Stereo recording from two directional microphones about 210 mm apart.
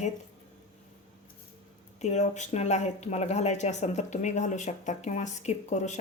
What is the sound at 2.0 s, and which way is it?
Speech, 35° left (ahead or behind).